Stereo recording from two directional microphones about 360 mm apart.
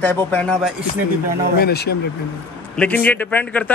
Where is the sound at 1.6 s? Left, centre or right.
Left.